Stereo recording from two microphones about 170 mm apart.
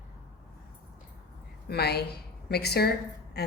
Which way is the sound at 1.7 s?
70° left (ahead or behind).